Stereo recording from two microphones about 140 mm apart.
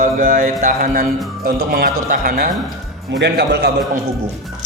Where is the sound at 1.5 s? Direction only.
90° right.